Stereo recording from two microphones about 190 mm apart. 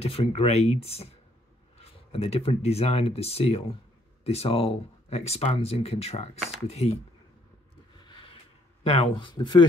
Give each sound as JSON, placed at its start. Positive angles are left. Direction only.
{"t": 0.0, "sound": "speech", "side_deg": 30}
{"t": 8.1, "sound": "a sound", "side_deg": 25}
{"t": 8.8, "sound": "speech", "side_deg": 30}